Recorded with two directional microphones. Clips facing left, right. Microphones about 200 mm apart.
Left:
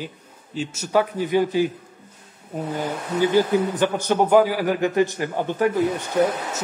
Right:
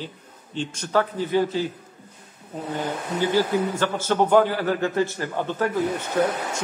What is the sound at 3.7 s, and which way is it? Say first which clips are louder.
A man's voice: left 2 dB; 15° left (ahead or behind).